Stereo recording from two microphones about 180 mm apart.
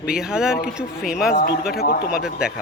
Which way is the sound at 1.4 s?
55° left (ahead or behind).